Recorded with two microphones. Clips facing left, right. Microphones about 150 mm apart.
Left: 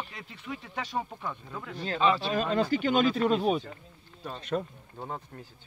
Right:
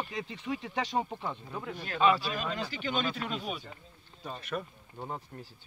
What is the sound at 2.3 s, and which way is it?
Speech, 40° left (ahead or behind).